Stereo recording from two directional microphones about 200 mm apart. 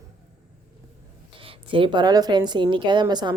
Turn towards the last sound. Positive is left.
turn(degrees=-20)  # may be behind; listen again after turning